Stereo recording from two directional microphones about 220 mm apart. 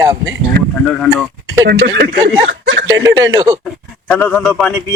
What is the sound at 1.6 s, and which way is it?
Speech, 50° right (ahead or behind).